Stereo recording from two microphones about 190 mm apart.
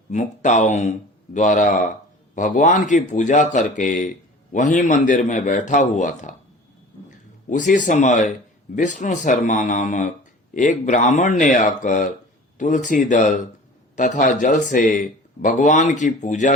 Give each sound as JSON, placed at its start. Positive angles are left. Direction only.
{"t": 0.1, "sound": "speech", "side_deg": 40}
{"t": 7.5, "sound": "speech", "side_deg": 40}